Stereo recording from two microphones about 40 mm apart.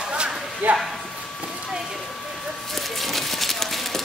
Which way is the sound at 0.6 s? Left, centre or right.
Right.